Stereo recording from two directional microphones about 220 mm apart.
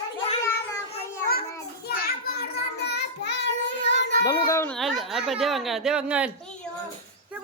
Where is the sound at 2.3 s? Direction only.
45° left (ahead or behind).